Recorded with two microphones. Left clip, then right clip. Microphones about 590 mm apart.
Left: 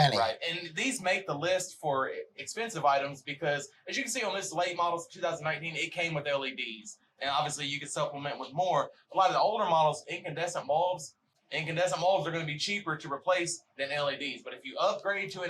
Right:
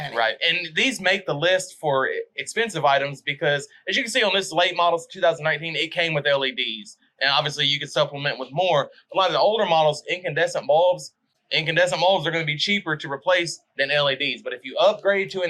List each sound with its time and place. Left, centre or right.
0.3 s speech: right